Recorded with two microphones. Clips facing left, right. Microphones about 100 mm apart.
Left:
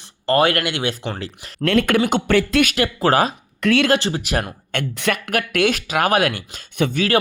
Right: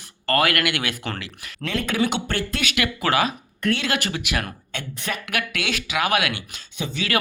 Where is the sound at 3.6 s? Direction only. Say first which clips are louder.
Left 7 dB; 90° left.